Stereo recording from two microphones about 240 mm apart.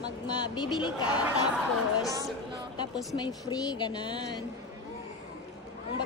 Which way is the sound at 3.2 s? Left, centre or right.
Centre.